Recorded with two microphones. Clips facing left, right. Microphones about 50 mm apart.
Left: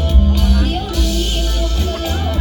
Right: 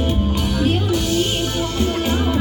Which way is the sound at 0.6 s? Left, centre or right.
Centre.